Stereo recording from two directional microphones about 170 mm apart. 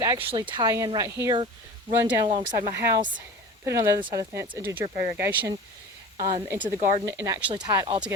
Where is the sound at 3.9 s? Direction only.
30° right (ahead or behind).